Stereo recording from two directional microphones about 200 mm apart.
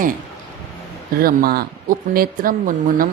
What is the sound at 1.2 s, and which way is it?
Speech, 50° right (ahead or behind).